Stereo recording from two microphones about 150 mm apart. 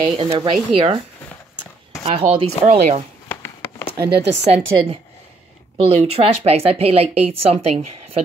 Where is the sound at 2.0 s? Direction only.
40° right (ahead or behind).